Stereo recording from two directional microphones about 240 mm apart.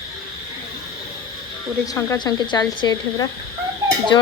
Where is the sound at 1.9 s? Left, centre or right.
Centre.